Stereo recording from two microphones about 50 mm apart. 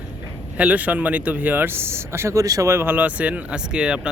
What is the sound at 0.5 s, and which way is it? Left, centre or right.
Speech, right.